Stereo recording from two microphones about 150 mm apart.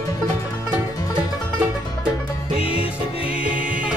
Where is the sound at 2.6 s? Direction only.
40° left (ahead or behind).